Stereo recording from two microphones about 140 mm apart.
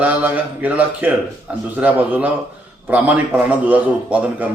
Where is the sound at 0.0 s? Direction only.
10° right (ahead or behind).